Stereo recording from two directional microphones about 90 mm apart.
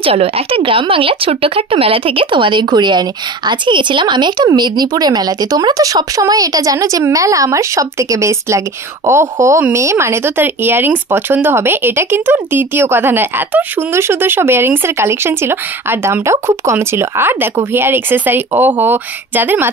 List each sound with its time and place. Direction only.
0.0 s speech: 90° right; by 19.7 s 20° right (ahead or behind)